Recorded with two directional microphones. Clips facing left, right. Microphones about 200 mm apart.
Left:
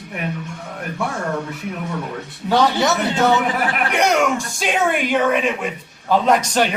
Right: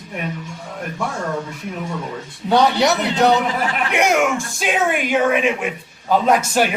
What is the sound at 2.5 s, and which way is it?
Speech, 15° right (ahead or behind).